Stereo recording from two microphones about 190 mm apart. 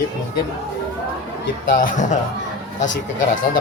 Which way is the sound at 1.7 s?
45° left (ahead or behind).